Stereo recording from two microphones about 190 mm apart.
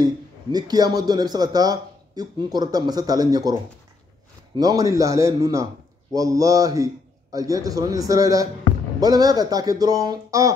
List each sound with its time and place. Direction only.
0.0 s speech: 20° right (ahead or behind)
4.6 s a man's voice: 20° right (ahead or behind)